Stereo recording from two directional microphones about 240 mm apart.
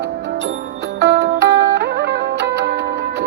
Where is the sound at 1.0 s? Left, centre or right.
Right.